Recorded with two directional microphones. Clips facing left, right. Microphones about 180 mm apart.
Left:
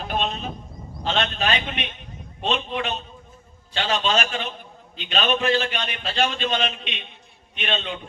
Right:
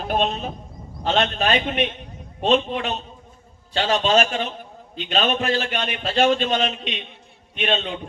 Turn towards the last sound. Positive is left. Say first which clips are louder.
# right 4 dB
turn(degrees=-40)  # may be behind; listen again after turning